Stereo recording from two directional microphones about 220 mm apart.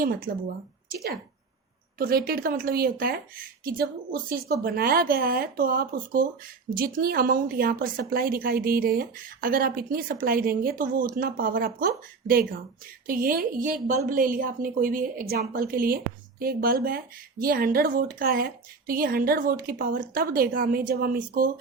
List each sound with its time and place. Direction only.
2.0 s a woman's voice: 40° right (ahead or behind)